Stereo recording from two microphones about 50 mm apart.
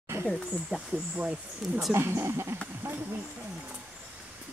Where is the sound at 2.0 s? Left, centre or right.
Right.